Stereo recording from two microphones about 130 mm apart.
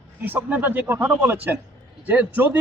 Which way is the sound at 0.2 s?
15° right (ahead or behind).